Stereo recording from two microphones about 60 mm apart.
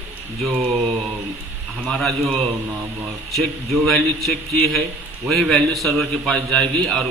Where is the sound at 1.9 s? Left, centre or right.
Centre.